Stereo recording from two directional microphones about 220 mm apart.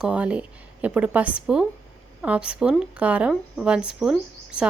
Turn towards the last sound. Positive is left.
turn(degrees=-5)  # may be behind; listen again after turning